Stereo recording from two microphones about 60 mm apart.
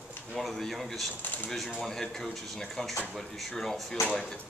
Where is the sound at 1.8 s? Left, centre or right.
Centre.